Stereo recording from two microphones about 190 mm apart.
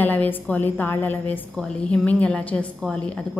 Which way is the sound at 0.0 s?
10° left (ahead or behind).